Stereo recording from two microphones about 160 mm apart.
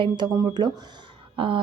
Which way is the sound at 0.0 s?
30° right (ahead or behind).